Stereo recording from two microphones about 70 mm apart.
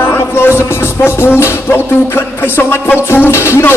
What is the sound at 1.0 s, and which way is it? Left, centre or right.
Music, left.